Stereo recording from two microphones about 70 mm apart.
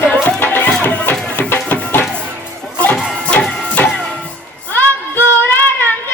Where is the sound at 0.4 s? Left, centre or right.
Left.